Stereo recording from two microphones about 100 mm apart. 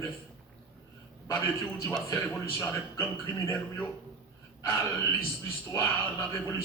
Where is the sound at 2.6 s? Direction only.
30° left (ahead or behind).